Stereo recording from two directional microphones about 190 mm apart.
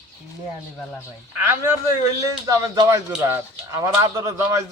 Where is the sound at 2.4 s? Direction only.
15° right (ahead or behind).